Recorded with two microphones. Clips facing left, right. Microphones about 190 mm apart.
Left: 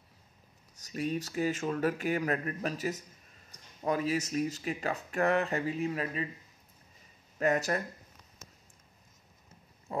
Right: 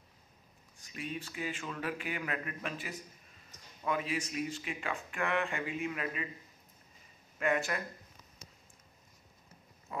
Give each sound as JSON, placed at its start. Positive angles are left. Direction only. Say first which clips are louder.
{"t": 0.7, "sound": "speech", "louder": "left 8 dB", "side_deg": 40}
{"t": 7.3, "sound": "speech", "louder": "left 4 dB", "side_deg": 40}
{"t": 9.9, "sound": "pig", "louder": "left 6 dB", "side_deg": 35}